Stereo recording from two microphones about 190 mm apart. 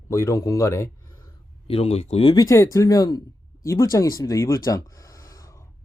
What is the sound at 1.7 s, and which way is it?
Speech, 30° left (ahead or behind).